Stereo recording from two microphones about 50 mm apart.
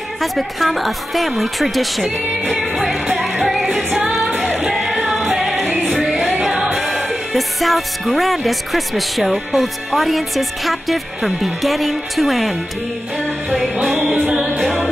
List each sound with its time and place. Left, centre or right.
0.2 s speech: centre
2.6 s music: centre
5.6 s music: right
5.9 s music: centre
7.1 s speech: centre